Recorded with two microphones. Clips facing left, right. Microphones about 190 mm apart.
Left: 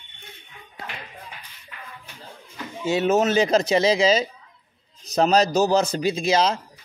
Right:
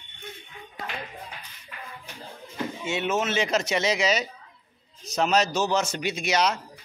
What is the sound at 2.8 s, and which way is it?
Speech, 40° left (ahead or behind).